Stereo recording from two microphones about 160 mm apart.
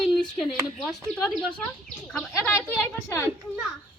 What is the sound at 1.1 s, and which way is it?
Speech, centre (ahead or behind).